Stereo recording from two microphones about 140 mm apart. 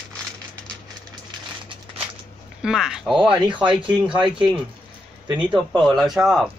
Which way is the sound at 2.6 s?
5° right (ahead or behind).